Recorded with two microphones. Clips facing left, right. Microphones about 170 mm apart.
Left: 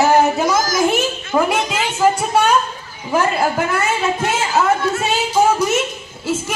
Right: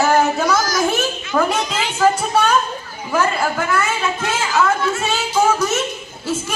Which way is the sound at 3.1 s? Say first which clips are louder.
Left 2 dB; 25° left (ahead or behind).